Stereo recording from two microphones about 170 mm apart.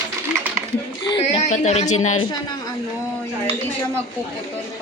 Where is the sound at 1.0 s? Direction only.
30° left (ahead or behind).